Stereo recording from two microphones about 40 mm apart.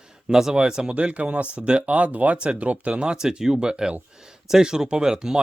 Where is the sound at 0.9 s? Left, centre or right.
Right; by 5.4 s centre.